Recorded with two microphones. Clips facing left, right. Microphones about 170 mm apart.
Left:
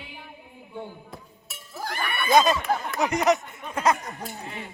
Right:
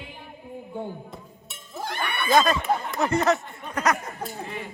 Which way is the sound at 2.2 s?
20° left (ahead or behind).